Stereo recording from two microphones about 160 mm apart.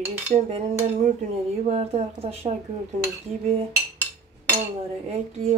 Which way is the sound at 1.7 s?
40° right (ahead or behind).